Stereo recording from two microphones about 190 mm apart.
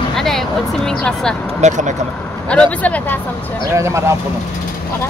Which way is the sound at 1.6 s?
40° right (ahead or behind).